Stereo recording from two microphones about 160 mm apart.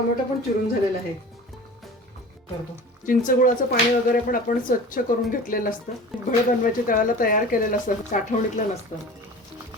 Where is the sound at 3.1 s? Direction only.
60° left (ahead or behind).